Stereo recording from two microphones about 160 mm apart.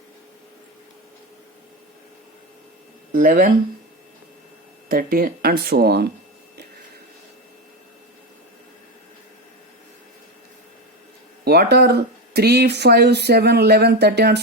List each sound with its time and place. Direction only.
3.1 s speech: 60° right (ahead or behind)
4.9 s speech: 65° right (ahead or behind)
11.4 s speech: 90° right